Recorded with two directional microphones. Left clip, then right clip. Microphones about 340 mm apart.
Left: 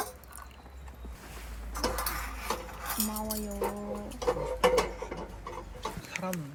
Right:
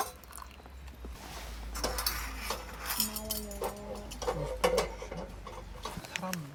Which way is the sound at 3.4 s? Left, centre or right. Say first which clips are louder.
Left 5 dB; left.